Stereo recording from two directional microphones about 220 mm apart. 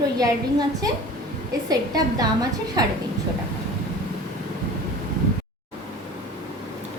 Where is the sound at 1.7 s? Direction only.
15° right (ahead or behind).